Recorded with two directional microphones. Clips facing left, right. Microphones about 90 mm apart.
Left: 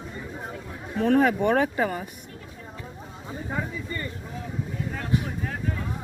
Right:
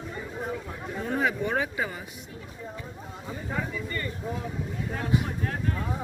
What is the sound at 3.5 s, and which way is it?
Speech, 20° left (ahead or behind).